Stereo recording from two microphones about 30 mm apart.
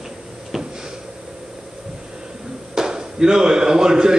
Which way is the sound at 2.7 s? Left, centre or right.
Right.